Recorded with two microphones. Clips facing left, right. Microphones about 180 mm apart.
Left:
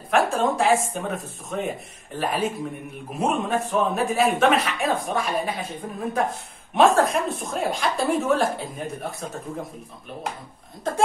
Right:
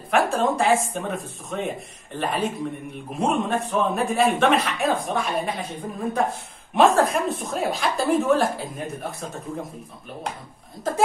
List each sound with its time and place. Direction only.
0.1 s speech: centre (ahead or behind)